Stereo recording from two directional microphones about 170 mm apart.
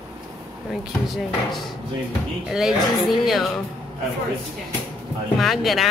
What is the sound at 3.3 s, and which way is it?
Speech, centre (ahead or behind).